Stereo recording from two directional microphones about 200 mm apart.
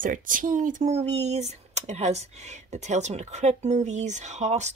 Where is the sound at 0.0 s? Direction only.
40° right (ahead or behind).